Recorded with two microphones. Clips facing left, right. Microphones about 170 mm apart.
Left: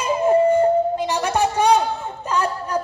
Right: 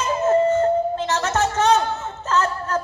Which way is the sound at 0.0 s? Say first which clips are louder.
Left 2 dB; 15° left (ahead or behind).